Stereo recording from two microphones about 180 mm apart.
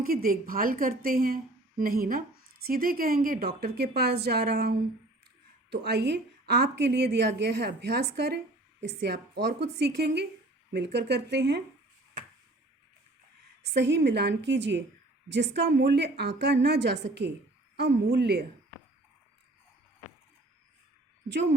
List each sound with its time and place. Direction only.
0.0 s a woman's voice: 55° right (ahead or behind); by 11.6 s 70° right (ahead or behind)
13.6 s a woman's voice: 70° right (ahead or behind)